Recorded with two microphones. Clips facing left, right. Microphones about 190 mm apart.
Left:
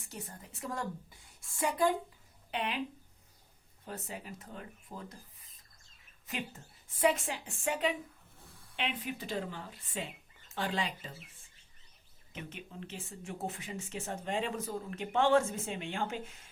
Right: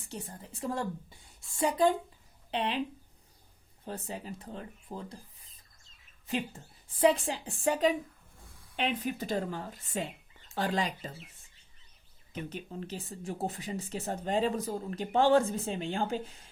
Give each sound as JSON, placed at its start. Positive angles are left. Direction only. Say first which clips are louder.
{"t": 0.1, "sound": "a woman's voice", "louder": "right 4 dB", "side_deg": -30}
{"t": 3.8, "sound": "speech", "louder": "right 4 dB", "side_deg": -30}
{"t": 6.2, "sound": "speech", "louder": "right 6 dB", "side_deg": -30}
{"t": 8.4, "sound": "a sound", "louder": "left 1 dB", "side_deg": 0}
{"t": 8.7, "sound": "a woman's voice", "louder": "right 5 dB", "side_deg": -45}
{"t": 12.3, "sound": "speech", "louder": "right 6 dB", "side_deg": -40}